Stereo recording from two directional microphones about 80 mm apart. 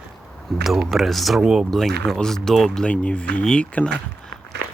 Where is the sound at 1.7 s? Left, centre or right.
Centre.